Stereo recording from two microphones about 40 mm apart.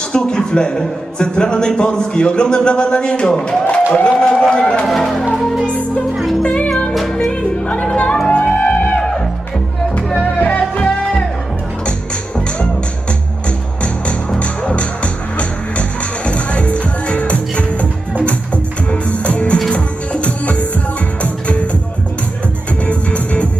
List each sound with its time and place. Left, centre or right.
0.1 s a man's voice: centre
3.7 s a man's voice: left
4.9 s speech: centre
6.4 s music: left
10.4 s music: left
14.3 s music: left
22.9 s music: left